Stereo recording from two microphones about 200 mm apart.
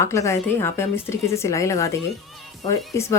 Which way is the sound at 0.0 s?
15° left (ahead or behind).